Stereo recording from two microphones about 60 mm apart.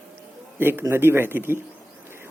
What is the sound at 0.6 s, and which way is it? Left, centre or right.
Speech, right.